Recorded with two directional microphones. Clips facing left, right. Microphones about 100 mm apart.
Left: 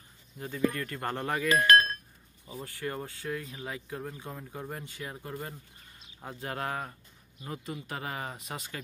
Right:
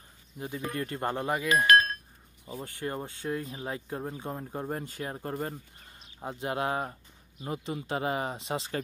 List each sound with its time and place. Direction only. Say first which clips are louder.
0.4 s speech: left 3 dB; 20° right (ahead or behind)
1.1 s speech: even; 10° right (ahead or behind)
2.4 s speech: right 1 dB; 25° right (ahead or behind)
6.1 s speech: right 5 dB; 20° right (ahead or behind)